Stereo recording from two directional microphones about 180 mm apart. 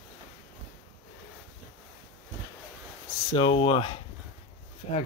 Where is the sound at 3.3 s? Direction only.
30° left (ahead or behind).